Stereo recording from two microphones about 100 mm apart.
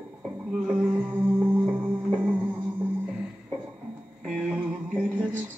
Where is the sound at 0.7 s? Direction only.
20° right (ahead or behind).